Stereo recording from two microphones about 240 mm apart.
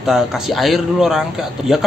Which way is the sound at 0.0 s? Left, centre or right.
Centre.